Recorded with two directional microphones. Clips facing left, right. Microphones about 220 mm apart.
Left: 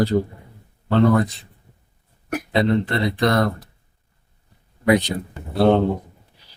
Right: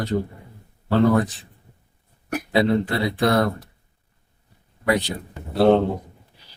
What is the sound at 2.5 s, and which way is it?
Speech, 5° right (ahead or behind).